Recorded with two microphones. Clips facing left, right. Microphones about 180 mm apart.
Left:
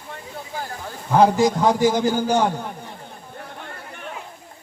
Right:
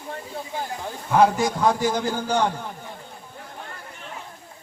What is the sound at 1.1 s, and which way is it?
A man's voice, 25° left (ahead or behind).